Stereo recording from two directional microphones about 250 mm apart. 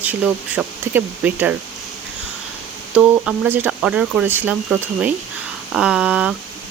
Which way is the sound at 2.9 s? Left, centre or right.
Centre.